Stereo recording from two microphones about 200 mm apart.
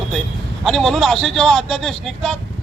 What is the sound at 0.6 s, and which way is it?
A man's voice, centre (ahead or behind).